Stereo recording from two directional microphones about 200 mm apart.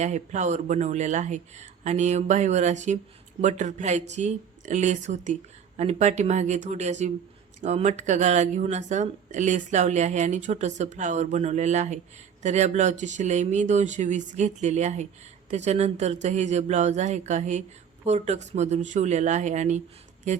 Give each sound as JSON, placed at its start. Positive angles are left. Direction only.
{"t": 0.0, "sound": "speech", "side_deg": -35}